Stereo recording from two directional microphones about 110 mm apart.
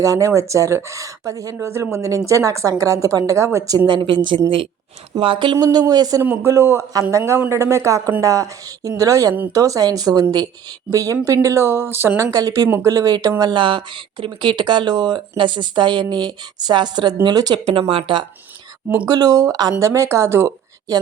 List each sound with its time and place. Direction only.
0.0 s a woman's voice: 30° right (ahead or behind)
6.2 s a woman's voice: 20° right (ahead or behind)
13.4 s speech: 45° right (ahead or behind)
17.7 s speech: 55° right (ahead or behind)
19.0 s speech: 35° right (ahead or behind)